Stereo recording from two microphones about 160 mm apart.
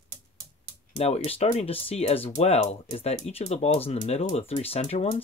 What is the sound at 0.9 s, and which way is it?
Speech, 40° left (ahead or behind).